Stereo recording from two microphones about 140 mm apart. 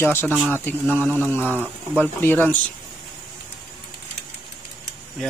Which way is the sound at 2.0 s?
15° left (ahead or behind).